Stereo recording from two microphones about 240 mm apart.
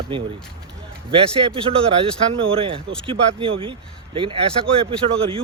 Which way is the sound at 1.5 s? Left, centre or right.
Right.